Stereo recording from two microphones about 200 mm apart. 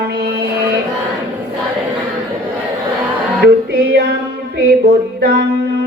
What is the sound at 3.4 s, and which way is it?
Music, 55° right (ahead or behind).